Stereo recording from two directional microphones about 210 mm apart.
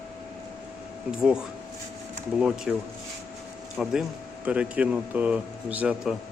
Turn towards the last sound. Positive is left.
turn(degrees=-5)  # may be behind; listen again after turning